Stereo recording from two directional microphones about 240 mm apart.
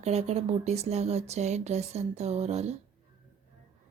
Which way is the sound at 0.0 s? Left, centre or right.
Right.